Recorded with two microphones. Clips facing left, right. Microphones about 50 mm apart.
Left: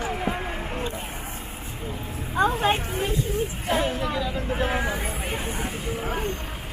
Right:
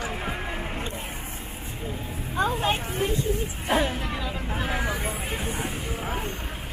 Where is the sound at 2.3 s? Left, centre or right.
Centre.